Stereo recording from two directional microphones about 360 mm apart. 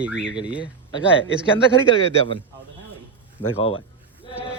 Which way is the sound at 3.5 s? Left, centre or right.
Centre.